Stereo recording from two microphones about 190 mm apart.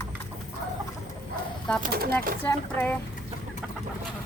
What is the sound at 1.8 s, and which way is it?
Speech, 55° right (ahead or behind).